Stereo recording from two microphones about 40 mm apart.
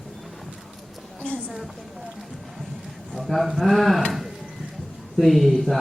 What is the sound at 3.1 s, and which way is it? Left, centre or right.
Speech, centre.